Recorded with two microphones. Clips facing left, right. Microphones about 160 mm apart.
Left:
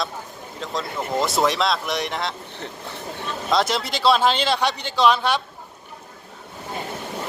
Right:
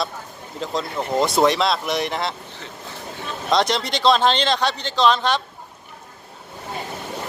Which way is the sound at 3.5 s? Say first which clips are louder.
Right 2 dB; 5° left (ahead or behind).